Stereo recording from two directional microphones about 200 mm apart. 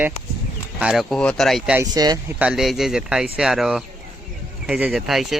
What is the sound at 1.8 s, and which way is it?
Speech, 20° right (ahead or behind).